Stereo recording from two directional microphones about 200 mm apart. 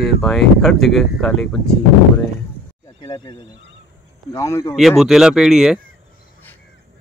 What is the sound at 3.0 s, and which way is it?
Speech, 25° left (ahead or behind).